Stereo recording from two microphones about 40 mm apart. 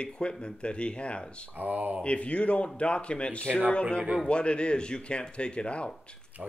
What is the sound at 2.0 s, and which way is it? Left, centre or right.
Speech, left.